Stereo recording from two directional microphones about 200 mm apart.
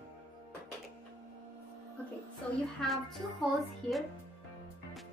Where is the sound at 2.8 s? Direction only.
Centre (ahead or behind).